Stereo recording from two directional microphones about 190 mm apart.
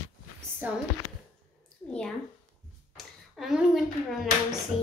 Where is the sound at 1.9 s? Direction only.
5° left (ahead or behind).